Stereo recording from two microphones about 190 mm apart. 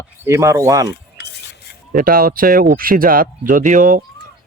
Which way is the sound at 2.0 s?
50° right (ahead or behind).